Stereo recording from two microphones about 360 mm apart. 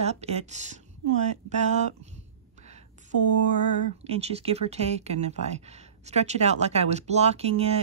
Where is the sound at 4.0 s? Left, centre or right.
Centre.